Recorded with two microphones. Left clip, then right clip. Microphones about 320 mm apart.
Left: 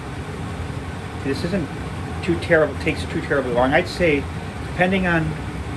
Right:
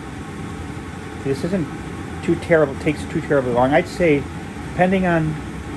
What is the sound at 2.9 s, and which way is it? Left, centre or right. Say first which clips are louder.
Speech: right 2 dB; right.